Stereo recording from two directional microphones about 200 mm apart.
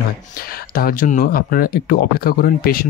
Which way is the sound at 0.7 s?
45° left (ahead or behind).